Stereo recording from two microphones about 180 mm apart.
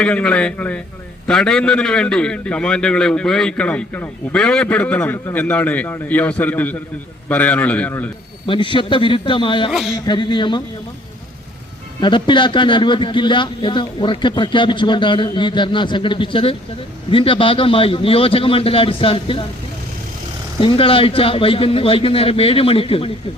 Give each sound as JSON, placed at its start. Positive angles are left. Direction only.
{"t": 0.0, "sound": "a man's voice", "side_deg": 5}
{"t": 8.4, "sound": "a man's voice", "side_deg": 25}
{"t": 11.9, "sound": "a man's voice", "side_deg": 25}
{"t": 20.6, "sound": "a man's voice", "side_deg": 30}